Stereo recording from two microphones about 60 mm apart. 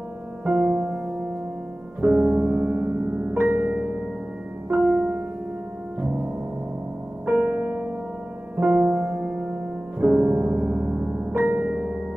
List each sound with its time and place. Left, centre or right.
0.5 s music: right
2.0 s music: right
2.4 s music: right
3.2 s music: right
7.2 s music: right